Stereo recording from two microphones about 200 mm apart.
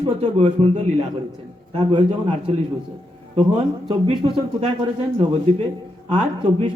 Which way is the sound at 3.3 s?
25° right (ahead or behind).